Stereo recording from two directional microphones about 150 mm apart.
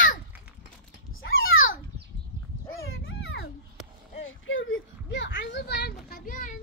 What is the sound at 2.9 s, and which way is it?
Dog, 90° left.